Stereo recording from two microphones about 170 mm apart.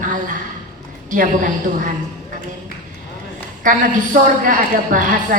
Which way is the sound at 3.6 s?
50° right (ahead or behind).